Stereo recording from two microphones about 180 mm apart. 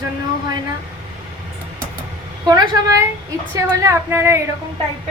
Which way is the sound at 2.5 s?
20° right (ahead or behind).